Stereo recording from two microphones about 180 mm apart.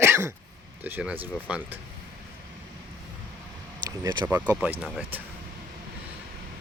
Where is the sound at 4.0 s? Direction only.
20° right (ahead or behind).